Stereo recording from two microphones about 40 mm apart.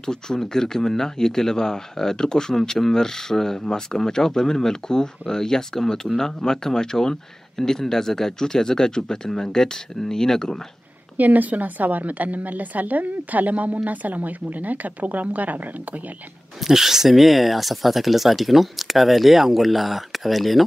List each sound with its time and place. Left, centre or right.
0.0 s speech: centre
11.1 s a woman's voice: right
16.5 s speech: centre